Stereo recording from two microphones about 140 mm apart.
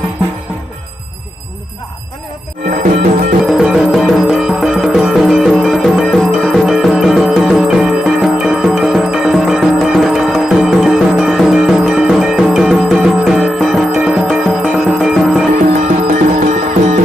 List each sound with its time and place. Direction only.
2.6 s music: 85° right
3.4 s music: 5° right (ahead or behind)
15.5 s music: 60° right (ahead or behind)